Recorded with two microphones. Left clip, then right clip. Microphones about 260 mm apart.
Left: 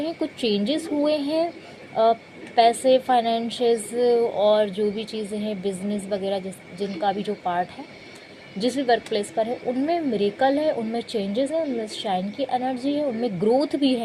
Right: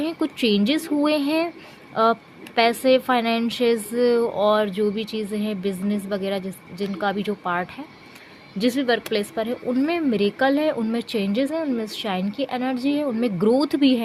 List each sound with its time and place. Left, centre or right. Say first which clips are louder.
0.0 s a woman's voice: right 2 dB; right
2.6 s a woman's voice: left 1 dB; right